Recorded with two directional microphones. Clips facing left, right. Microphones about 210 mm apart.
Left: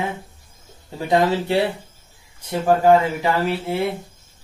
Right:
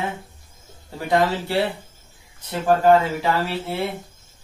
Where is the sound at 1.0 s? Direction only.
20° left (ahead or behind).